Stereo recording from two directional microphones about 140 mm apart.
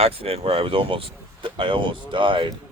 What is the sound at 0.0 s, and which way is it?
Speech, 45° right (ahead or behind).